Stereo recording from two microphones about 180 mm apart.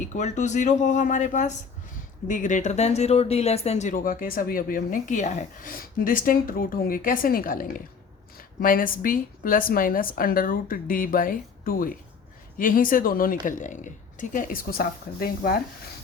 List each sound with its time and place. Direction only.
0.1 s speech: 40° left (ahead or behind)